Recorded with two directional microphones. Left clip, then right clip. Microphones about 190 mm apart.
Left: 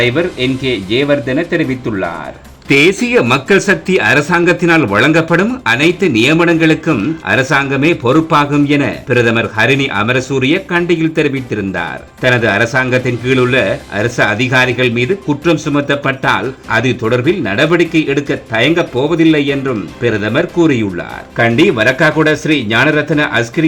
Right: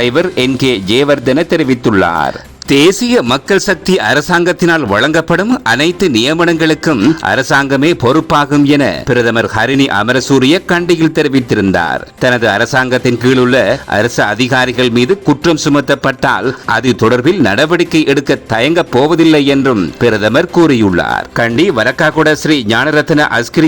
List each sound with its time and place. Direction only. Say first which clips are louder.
0.0 s speech: right 2 dB; 45° right (ahead or behind)
2.6 s speech: right 1 dB; 35° right (ahead or behind)